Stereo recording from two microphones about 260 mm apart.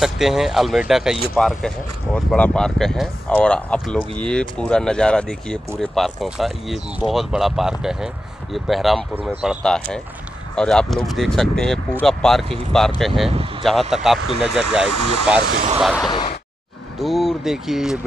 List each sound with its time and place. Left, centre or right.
0.0 s speech: centre
13.3 s speech: right
13.7 s speech: centre
15.0 s speech: right
15.8 s speech: centre
16.1 s a sound: centre
17.0 s speech: centre